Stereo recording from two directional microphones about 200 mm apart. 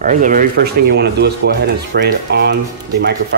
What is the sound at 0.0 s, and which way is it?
Speech, 40° right (ahead or behind).